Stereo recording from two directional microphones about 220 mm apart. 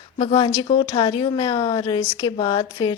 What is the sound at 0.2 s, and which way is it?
A woman's voice, 25° left (ahead or behind).